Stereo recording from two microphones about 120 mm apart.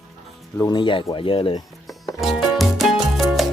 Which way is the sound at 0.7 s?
45° left (ahead or behind).